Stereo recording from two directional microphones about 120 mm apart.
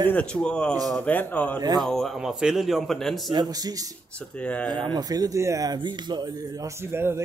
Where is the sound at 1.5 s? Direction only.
35° right (ahead or behind).